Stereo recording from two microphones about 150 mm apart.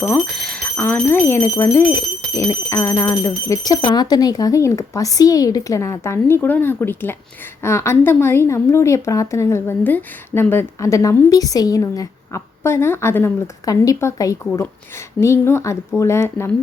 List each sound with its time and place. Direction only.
0.0 s a woman's voice: 5° left (ahead or behind)